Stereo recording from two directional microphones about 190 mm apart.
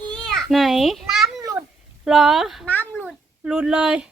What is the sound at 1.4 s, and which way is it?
Cat, 15° right (ahead or behind).